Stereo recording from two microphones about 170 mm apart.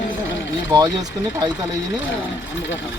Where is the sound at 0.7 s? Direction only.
25° right (ahead or behind).